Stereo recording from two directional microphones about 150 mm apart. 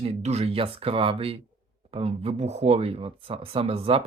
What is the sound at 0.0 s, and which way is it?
Speech, 45° right (ahead or behind).